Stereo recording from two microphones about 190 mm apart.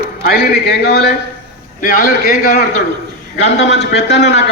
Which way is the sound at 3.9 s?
65° left (ahead or behind).